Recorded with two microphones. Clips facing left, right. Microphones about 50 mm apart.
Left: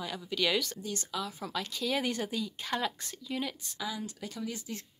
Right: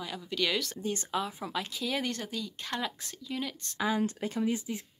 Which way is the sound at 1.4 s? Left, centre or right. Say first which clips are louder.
Even; centre.